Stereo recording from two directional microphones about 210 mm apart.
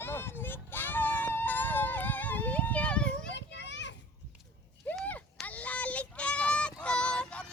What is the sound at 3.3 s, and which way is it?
Children playing, 55° left (ahead or behind).